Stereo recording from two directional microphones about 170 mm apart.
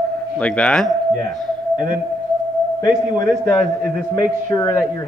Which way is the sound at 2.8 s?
20° left (ahead or behind).